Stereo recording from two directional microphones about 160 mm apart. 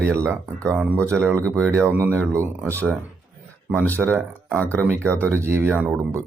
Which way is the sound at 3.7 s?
10° right (ahead or behind).